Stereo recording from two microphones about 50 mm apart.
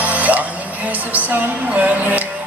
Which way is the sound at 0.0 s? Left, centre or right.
Right.